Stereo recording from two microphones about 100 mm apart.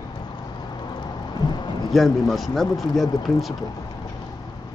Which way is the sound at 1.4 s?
45° left (ahead or behind).